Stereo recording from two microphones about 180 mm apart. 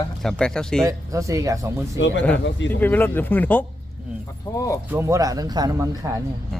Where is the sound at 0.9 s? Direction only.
20° right (ahead or behind).